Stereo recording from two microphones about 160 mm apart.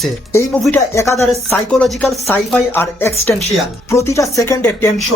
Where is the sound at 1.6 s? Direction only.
5° left (ahead or behind).